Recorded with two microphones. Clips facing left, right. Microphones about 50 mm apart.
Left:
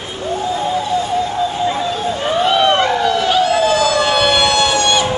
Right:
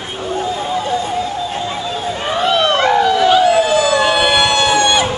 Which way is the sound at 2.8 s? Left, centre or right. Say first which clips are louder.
Right 3 dB; centre.